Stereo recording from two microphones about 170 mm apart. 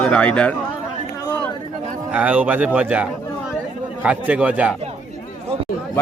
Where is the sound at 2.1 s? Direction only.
10° right (ahead or behind).